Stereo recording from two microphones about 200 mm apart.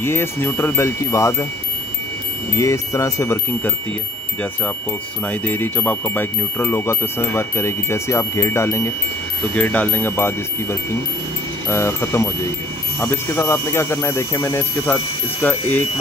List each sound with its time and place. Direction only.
0.0 s speech: 10° left (ahead or behind)
2.5 s speech: 15° left (ahead or behind)
5.3 s speech: 10° left (ahead or behind)